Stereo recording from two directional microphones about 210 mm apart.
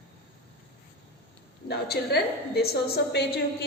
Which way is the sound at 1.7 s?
50° left (ahead or behind).